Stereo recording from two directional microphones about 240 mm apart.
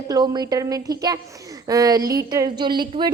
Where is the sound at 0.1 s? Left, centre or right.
Centre.